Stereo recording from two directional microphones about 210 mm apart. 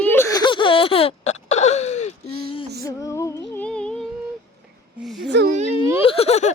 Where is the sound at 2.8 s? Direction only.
15° left (ahead or behind).